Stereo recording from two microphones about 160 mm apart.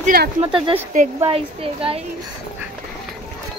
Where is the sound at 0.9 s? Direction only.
50° right (ahead or behind).